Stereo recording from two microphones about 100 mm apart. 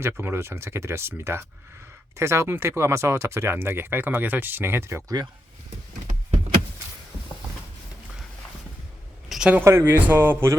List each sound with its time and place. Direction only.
0.0 s speech: 25° right (ahead or behind)
9.3 s a sound: 5° right (ahead or behind)
9.6 s speech: 25° right (ahead or behind)